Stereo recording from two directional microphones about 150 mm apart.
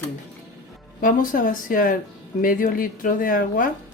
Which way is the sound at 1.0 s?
65° left (ahead or behind).